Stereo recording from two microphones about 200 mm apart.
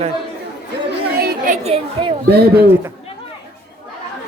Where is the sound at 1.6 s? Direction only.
30° right (ahead or behind).